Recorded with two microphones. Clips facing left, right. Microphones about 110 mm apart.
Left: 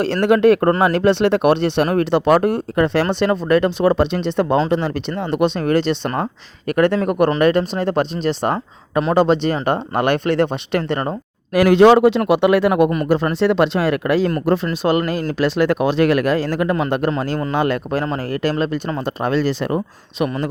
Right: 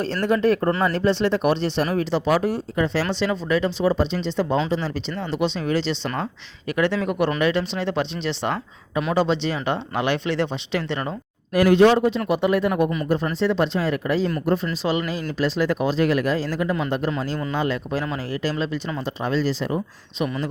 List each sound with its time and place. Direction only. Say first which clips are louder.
0.0 s speech: left 7 dB; 70° left (ahead or behind); by 11.1 s 50° left (ahead or behind)
11.5 s a man's voice: left 5 dB; 85° left; by 14.4 s 65° left (ahead or behind)
14.4 s a man's voice: left 4 dB; 85° left
14.8 s speech: left 7 dB; 55° left (ahead or behind)